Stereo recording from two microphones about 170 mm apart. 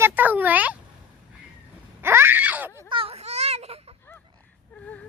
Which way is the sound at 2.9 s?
35° right (ahead or behind).